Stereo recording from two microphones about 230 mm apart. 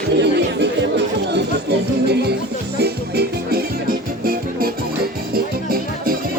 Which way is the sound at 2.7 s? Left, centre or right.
Right.